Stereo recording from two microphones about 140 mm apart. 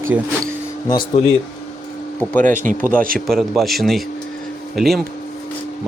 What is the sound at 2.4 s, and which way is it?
Speech, 70° right (ahead or behind).